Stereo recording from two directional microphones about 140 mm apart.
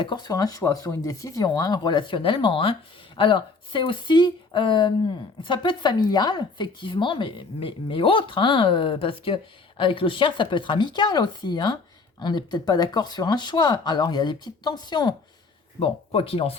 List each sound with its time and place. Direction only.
0.0 s speech: 30° left (ahead or behind)
15.8 s speech: 40° left (ahead or behind)